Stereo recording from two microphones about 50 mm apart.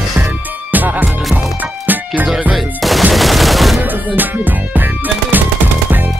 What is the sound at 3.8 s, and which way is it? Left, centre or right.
Music, right.